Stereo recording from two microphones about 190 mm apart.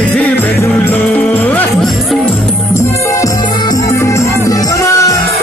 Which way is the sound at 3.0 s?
20° left (ahead or behind).